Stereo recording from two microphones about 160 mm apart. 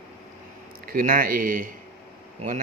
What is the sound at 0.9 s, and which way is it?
Speech, 60° right (ahead or behind).